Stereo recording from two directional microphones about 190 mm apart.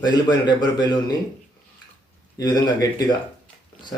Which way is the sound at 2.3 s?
20° left (ahead or behind).